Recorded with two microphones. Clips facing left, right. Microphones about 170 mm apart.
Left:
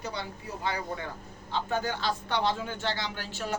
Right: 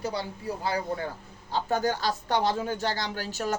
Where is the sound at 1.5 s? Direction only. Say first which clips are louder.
Right 4 dB; 40° right (ahead or behind).